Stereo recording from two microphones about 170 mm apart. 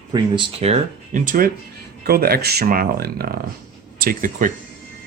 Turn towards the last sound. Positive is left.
turn(degrees=-55)  # may be behind; listen again after turning